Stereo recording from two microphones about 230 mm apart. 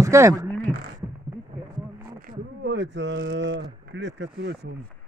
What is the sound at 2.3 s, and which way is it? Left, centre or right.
Speech, right.